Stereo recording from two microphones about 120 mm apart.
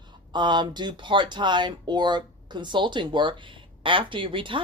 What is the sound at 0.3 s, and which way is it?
Speech, 40° right (ahead or behind).